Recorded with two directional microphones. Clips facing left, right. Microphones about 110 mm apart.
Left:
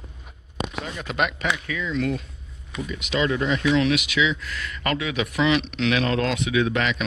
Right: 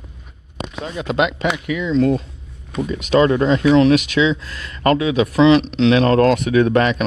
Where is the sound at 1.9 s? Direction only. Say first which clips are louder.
Right 10 dB; 30° right (ahead or behind).